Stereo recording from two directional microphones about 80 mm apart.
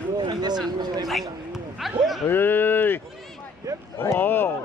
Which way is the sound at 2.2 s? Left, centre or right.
Left.